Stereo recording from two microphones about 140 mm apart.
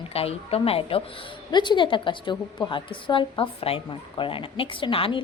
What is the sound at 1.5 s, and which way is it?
A woman's voice, 35° left (ahead or behind).